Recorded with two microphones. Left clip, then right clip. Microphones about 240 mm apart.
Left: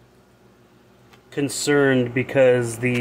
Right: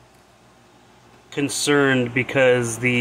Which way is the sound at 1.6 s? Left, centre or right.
Centre.